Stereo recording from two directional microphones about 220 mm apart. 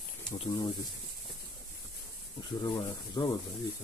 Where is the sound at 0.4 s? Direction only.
20° left (ahead or behind).